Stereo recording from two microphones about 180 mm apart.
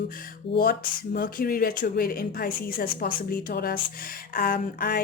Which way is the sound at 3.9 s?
55° left (ahead or behind).